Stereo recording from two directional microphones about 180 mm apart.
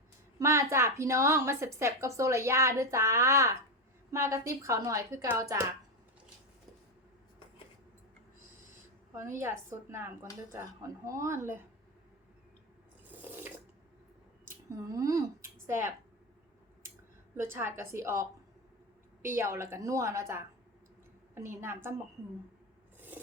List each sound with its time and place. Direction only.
0.3 s a woman's voice: 15° right (ahead or behind)
9.1 s a woman's voice: 15° right (ahead or behind)
13.1 s water: 10° right (ahead or behind)
14.9 s a woman's voice: 20° right (ahead or behind)
17.3 s a woman's voice: 15° right (ahead or behind)
23.0 s filing: 10° right (ahead or behind)